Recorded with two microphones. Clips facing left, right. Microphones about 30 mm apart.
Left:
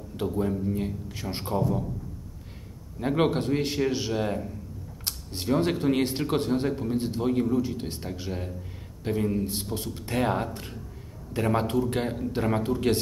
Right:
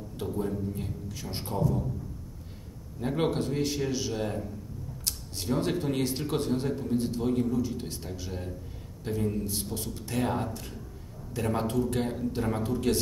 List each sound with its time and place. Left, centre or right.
0.2 s speech: left
3.0 s speech: left